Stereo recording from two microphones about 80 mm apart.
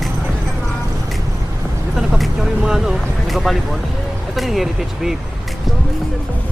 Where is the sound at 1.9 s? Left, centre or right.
Centre.